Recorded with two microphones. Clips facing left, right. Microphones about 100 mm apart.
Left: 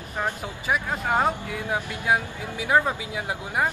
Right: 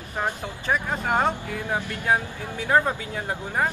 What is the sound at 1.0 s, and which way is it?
Speech, 5° left (ahead or behind).